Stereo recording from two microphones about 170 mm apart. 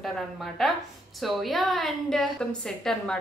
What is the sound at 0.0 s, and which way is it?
Speech, centre (ahead or behind).